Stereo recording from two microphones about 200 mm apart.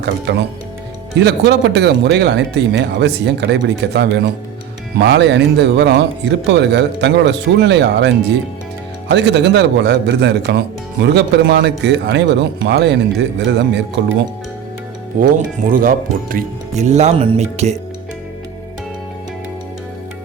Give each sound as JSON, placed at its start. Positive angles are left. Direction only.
{"t": 0.0, "sound": "speech", "side_deg": -60}
{"t": 15.2, "sound": "speech", "side_deg": -45}